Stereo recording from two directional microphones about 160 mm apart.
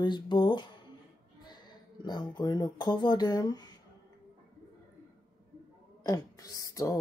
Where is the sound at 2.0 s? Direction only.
25° left (ahead or behind).